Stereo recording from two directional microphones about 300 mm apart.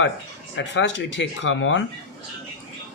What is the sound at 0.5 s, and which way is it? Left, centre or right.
Speech, left.